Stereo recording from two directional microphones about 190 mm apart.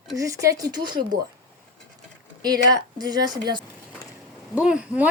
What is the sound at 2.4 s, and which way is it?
Speech, 20° right (ahead or behind).